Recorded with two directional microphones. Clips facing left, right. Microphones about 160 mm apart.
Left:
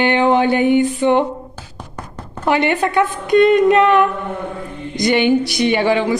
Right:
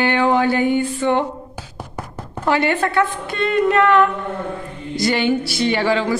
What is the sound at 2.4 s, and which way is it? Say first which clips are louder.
A woman's voice: left 2 dB; 15° left (ahead or behind).